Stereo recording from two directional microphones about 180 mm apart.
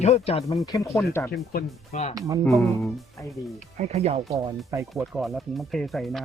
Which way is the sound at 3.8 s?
35° right (ahead or behind).